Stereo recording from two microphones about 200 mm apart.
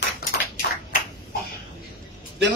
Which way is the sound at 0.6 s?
55° left (ahead or behind).